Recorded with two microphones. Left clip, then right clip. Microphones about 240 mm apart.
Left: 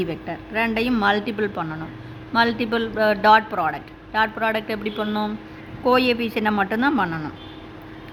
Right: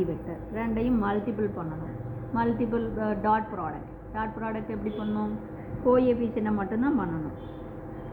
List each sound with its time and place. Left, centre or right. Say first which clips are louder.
0.5 s speech: left 7 dB; left